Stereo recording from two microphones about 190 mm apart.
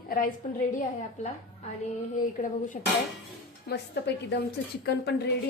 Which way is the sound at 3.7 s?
65° left (ahead or behind).